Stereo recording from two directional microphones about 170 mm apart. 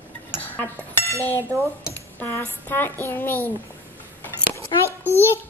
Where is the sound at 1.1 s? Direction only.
15° left (ahead or behind).